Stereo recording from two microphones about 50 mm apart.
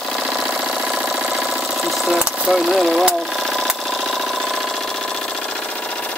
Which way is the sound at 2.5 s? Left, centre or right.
Centre.